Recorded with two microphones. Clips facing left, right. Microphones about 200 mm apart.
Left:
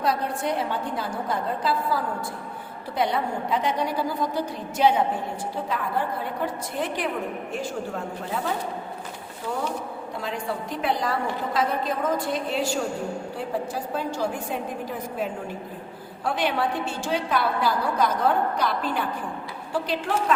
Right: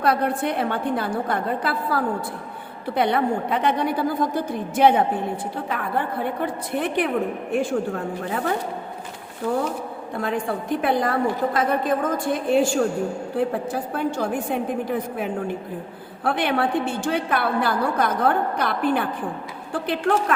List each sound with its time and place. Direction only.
0.0 s a woman's voice: 60° right (ahead or behind)
10.2 s a woman's voice: 55° right (ahead or behind)